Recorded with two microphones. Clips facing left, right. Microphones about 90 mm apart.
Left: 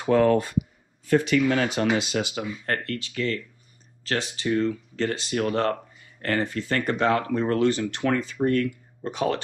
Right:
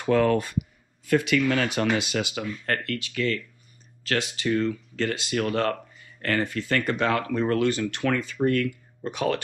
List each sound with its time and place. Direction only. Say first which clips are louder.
0.0 s speech: left 2 dB; 25° left (ahead or behind)